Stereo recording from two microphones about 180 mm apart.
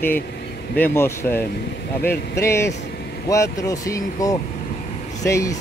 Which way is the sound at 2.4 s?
15° left (ahead or behind).